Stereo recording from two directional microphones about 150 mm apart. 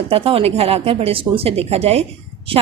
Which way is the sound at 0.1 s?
40° right (ahead or behind).